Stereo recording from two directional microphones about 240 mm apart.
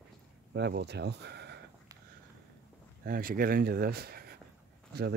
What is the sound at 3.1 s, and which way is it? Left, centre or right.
Speech, right.